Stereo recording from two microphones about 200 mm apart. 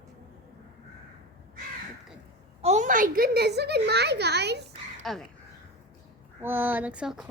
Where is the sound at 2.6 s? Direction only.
35° right (ahead or behind); by 4.6 s 55° right (ahead or behind).